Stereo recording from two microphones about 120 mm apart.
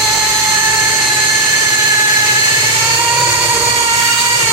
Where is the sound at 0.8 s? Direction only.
10° right (ahead or behind).